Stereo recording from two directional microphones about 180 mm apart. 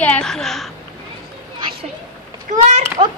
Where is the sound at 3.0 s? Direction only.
35° right (ahead or behind).